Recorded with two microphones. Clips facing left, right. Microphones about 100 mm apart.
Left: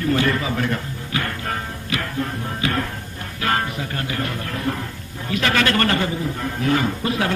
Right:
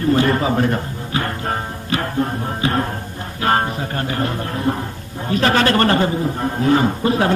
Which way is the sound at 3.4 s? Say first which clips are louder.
Right 5 dB; 35° right (ahead or behind).